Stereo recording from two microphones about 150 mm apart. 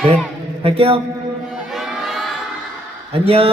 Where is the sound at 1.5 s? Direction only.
Centre (ahead or behind).